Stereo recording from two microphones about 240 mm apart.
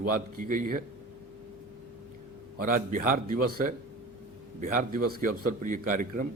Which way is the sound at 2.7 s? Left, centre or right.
Right.